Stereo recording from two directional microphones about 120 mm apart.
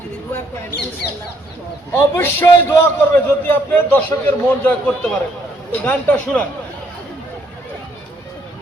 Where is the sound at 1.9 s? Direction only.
20° left (ahead or behind).